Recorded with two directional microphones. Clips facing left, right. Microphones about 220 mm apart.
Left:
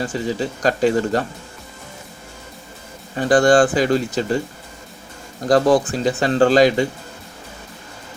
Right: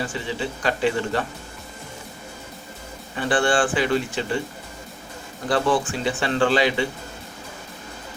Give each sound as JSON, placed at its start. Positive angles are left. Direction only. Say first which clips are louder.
{"t": 0.0, "sound": "speech", "louder": "left 5 dB", "side_deg": 40}
{"t": 3.2, "sound": "speech", "louder": "left 7 dB", "side_deg": 40}
{"t": 5.5, "sound": "speech", "louder": "left 7 dB", "side_deg": 40}